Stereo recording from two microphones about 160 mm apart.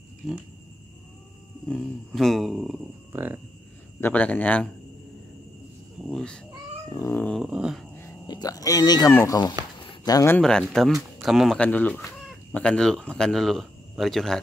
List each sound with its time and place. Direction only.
0.2 s speech: centre (ahead or behind)
1.7 s speech: centre (ahead or behind)
4.0 s speech: 10° left (ahead or behind)
6.0 s speech: 5° left (ahead or behind)
6.9 s speech: 15° left (ahead or behind)
7.3 s speech: 5° right (ahead or behind)
8.3 s speech: 25° left (ahead or behind)
9.8 s a sound: 25° left (ahead or behind)
10.3 s speech: 5° left (ahead or behind)